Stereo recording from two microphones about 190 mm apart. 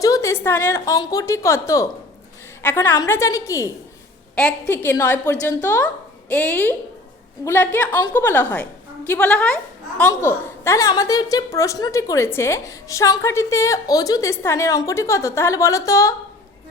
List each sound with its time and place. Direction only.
0.0 s a woman's voice: 15° left (ahead or behind)
4.7 s a woman's voice: 10° left (ahead or behind)